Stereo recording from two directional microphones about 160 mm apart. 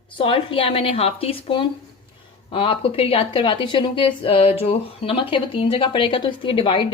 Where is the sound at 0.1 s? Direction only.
35° left (ahead or behind).